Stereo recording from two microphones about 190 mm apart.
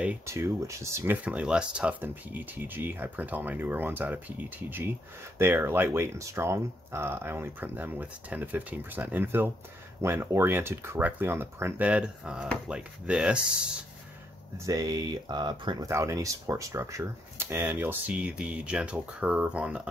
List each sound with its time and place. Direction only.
0.0 s speech: 10° right (ahead or behind)
14.6 s speech: 20° right (ahead or behind)